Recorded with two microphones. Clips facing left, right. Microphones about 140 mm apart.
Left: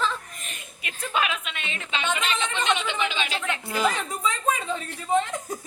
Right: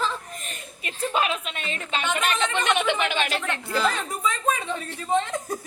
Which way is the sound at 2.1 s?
50° right (ahead or behind).